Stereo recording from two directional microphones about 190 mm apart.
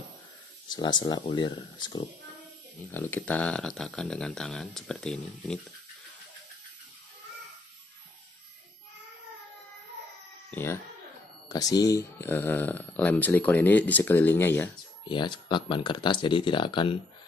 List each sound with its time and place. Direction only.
0.7 s speech: 20° left (ahead or behind)
2.9 s speech: 10° left (ahead or behind)
10.5 s cat: 10° left (ahead or behind)
11.4 s speech: 20° left (ahead or behind)
15.0 s speech: 25° left (ahead or behind)